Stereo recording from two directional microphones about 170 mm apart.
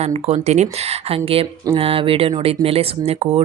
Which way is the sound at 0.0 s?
40° right (ahead or behind).